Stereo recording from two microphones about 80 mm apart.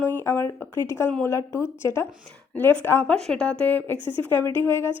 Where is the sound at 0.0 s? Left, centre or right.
Left.